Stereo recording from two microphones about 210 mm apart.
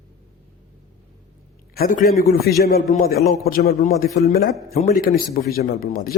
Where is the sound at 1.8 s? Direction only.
40° left (ahead or behind).